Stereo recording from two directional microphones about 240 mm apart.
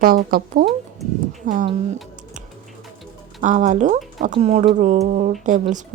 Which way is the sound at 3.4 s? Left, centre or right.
Right.